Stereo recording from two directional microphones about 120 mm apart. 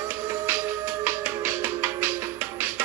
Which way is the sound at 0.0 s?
20° right (ahead or behind).